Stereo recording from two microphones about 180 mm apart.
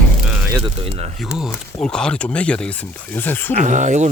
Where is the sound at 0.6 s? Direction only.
30° right (ahead or behind).